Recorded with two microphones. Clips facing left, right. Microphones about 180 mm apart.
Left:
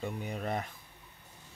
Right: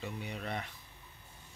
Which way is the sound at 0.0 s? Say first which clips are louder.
Left 4 dB; 45° left (ahead or behind).